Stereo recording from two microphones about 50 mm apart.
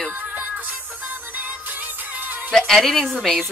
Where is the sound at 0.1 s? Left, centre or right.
Right.